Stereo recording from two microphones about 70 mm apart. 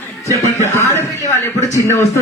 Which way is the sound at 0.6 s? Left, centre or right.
Left.